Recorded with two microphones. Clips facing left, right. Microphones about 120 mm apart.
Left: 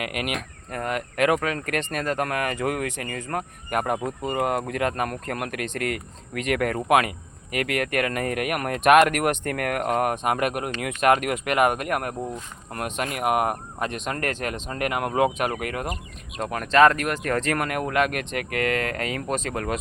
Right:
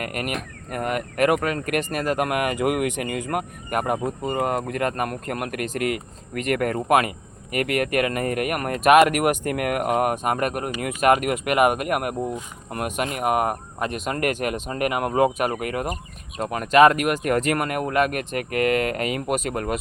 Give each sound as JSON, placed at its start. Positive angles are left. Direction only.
{"t": 0.0, "sound": "speech", "side_deg": 5}